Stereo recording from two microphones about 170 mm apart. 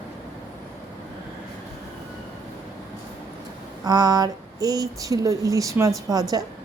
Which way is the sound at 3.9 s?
25° right (ahead or behind).